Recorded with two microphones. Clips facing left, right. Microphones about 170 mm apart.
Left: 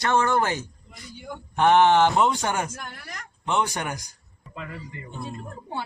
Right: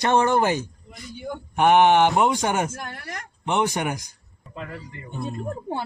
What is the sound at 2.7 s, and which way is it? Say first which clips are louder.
Speech: right 4 dB; 55° right (ahead or behind).